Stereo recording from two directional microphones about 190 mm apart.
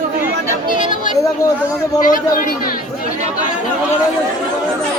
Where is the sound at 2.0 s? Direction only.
45° left (ahead or behind).